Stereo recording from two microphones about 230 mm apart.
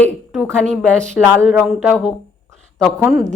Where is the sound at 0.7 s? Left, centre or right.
Right.